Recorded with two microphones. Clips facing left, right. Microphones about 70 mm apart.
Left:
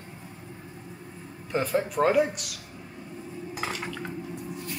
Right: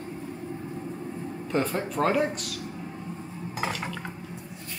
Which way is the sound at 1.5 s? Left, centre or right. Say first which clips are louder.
Left 1 dB; centre.